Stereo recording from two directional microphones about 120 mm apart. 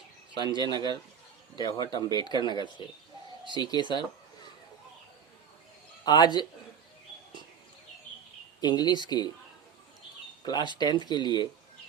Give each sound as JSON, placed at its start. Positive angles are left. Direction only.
{"t": 0.4, "sound": "speech", "side_deg": -40}
{"t": 1.5, "sound": "speech", "side_deg": 35}
{"t": 6.1, "sound": "speech", "side_deg": 35}
{"t": 8.6, "sound": "speech", "side_deg": 35}
{"t": 10.4, "sound": "speech", "side_deg": 35}